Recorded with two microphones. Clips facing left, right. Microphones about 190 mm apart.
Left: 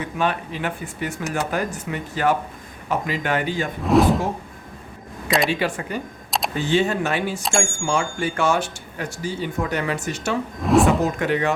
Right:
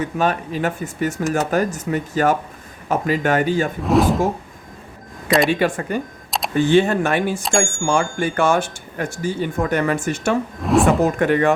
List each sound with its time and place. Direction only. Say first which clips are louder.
0.2 s speech: right 3 dB; 45° right (ahead or behind)
3.8 s speech: left 1 dB; centre (ahead or behind)
5.5 s speech: right 5 dB; 50° right (ahead or behind)
6.3 s camera: even; centre (ahead or behind)
6.7 s speech: right 4 dB; 55° right (ahead or behind)
10.6 s drawer open or close: even; centre (ahead or behind)
11.2 s speech: right 5 dB; 50° right (ahead or behind)